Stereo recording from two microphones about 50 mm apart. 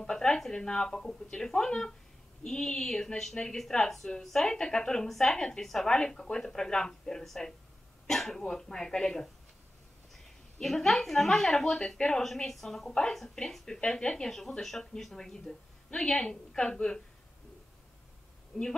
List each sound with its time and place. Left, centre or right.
0.0 s a woman's voice: centre
10.6 s a woman's voice: centre
18.5 s a woman's voice: centre